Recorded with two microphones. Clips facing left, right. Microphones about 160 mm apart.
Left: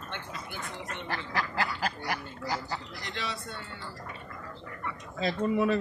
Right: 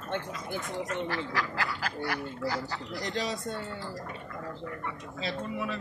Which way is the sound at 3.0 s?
40° right (ahead or behind).